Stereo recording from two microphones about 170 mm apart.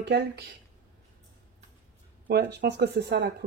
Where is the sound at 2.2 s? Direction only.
80° right.